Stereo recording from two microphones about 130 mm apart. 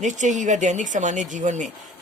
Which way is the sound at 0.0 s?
70° right (ahead or behind).